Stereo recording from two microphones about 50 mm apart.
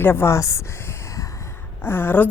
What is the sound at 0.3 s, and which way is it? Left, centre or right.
Speech, left.